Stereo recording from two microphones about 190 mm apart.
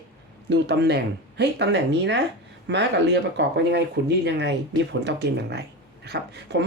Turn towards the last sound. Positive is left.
turn(degrees=-60)  # may be behind; listen again after turning